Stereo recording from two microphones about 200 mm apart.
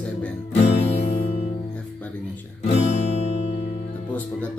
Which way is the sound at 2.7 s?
35° left (ahead or behind).